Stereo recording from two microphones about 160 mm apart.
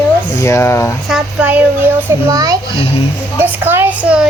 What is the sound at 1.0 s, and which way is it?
Speech, 5° right (ahead or behind).